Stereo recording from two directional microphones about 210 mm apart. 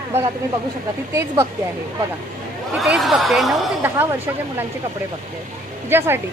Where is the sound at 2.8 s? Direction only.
Centre (ahead or behind).